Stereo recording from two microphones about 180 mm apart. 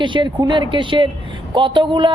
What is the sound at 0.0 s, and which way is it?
A man's voice, 25° right (ahead or behind).